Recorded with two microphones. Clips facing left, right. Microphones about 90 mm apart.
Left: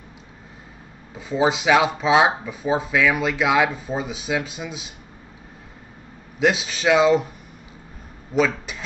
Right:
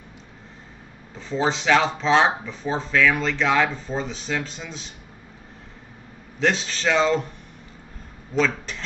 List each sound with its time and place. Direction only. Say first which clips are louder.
1.1 s speech: left 3 dB; 10° left (ahead or behind)
6.4 s speech: left 3 dB; 10° left (ahead or behind)
8.4 s speech: left 2 dB; 10° left (ahead or behind)